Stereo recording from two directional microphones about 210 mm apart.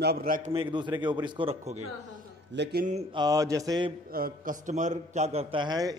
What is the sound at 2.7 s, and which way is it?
Speech, 35° right (ahead or behind).